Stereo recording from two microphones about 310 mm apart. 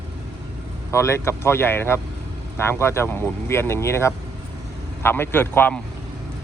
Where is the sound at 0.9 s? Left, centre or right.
Centre.